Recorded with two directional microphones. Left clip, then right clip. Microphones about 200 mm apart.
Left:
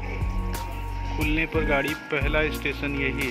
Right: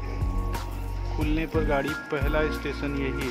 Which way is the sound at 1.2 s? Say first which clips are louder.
Left 2 dB; 5° right (ahead or behind).